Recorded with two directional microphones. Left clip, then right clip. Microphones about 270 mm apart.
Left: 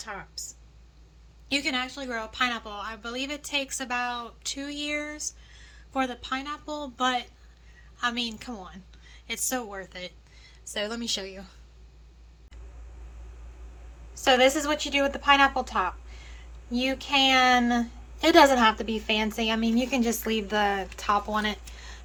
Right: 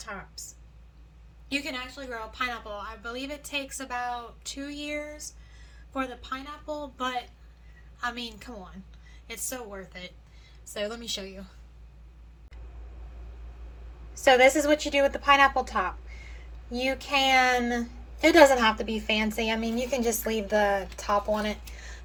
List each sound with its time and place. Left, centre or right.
0.0 s speech: left
1.5 s a woman's voice: left
14.1 s a woman's voice: centre